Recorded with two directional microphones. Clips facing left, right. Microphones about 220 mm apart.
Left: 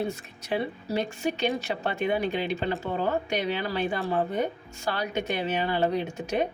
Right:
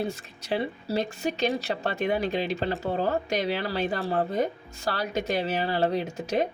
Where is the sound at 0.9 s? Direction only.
40° right (ahead or behind).